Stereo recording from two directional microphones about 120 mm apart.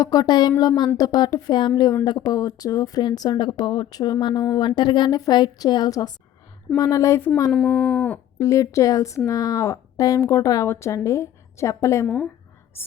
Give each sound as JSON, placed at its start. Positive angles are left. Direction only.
{"t": 0.0, "sound": "speech", "side_deg": 30}
{"t": 1.7, "sound": "speech", "side_deg": 25}
{"t": 7.5, "sound": "speech", "side_deg": 10}
{"t": 8.4, "sound": "speech", "side_deg": 25}